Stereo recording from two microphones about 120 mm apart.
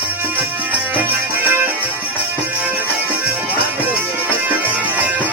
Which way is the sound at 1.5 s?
15° right (ahead or behind).